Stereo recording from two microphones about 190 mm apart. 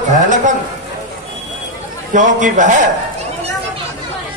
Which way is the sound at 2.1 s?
40° right (ahead or behind).